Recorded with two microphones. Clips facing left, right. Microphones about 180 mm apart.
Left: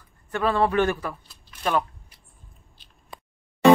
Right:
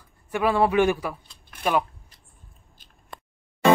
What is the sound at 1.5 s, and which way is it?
Shuffling cards, 55° right (ahead or behind).